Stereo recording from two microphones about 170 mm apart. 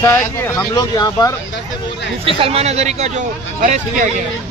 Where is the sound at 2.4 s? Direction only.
35° right (ahead or behind).